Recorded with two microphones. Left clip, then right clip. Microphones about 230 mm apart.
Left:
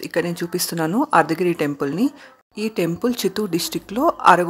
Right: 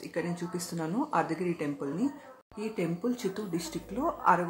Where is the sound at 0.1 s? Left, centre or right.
Left.